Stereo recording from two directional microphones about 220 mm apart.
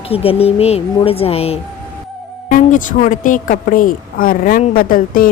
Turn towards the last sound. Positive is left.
turn(degrees=40)  # may be behind; listen again after turning